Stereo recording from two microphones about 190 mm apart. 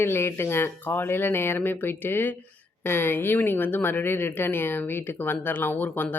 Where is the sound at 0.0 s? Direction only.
10° left (ahead or behind).